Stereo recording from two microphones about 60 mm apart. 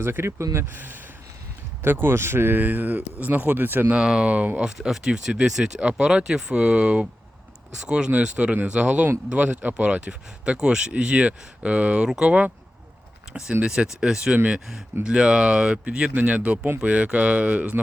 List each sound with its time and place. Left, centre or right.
0.0 s speech: right
0.5 s speech: right
3.9 s speech: centre
4.3 s speech: right
4.6 s speech: centre
13.6 s speech: centre